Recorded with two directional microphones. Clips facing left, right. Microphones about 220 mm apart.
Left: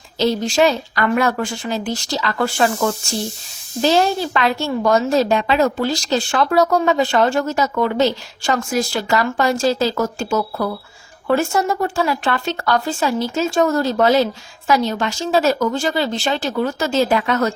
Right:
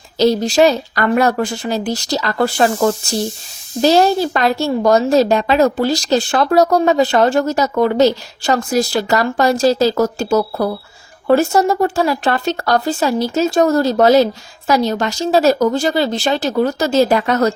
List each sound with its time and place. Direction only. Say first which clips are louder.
0.2 s a woman's voice: right 4 dB; 40° right (ahead or behind)